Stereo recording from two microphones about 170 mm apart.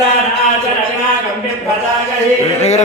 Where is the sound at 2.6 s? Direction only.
40° left (ahead or behind).